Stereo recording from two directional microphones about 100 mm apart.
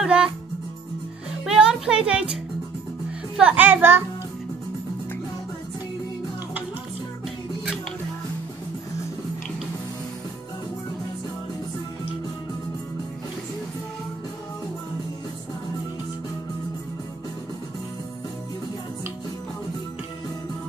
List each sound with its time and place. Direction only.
0.0 s music: 10° right (ahead or behind)
1.4 s music: 5° right (ahead or behind)
3.3 s a child's voice: 15° right (ahead or behind)